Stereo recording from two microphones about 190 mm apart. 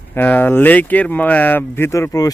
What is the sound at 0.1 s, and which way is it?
A man's voice, 10° left (ahead or behind).